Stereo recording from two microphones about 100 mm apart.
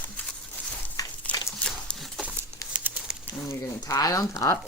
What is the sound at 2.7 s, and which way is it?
Crumpling, 10° right (ahead or behind).